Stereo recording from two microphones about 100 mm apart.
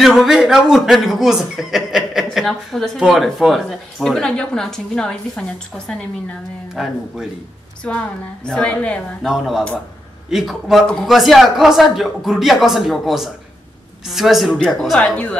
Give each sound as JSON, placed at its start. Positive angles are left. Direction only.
{"t": 0.0, "sound": "a woman's voice", "side_deg": 0}
{"t": 6.7, "sound": "speech", "side_deg": -5}
{"t": 8.5, "sound": "a woman's voice", "side_deg": 10}
{"t": 9.2, "sound": "speech", "side_deg": -5}